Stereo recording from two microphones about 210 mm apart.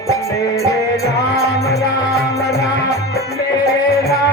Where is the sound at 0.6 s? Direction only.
15° left (ahead or behind).